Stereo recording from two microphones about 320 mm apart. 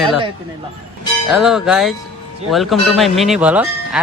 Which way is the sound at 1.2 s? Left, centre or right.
Centre.